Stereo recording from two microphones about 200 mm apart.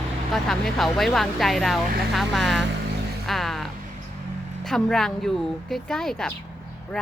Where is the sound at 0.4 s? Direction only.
Centre (ahead or behind).